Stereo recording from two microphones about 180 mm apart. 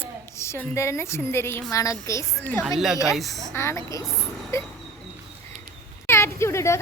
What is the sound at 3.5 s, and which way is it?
A woman's voice, 15° left (ahead or behind).